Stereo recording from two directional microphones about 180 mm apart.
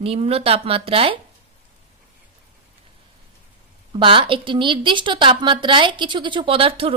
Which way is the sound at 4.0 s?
30° right (ahead or behind).